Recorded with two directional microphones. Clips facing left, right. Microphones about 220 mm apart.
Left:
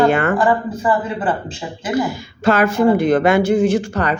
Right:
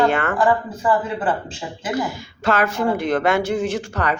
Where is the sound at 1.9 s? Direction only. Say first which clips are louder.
Left 5 dB; 5° left (ahead or behind).